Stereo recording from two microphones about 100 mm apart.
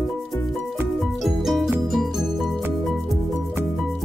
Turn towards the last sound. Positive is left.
turn(degrees=-5)  # may be behind; listen again after turning